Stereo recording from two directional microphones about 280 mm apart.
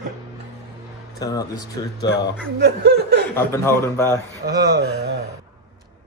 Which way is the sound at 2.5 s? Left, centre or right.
Right.